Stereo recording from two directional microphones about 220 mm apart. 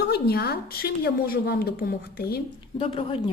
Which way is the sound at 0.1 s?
45° left (ahead or behind).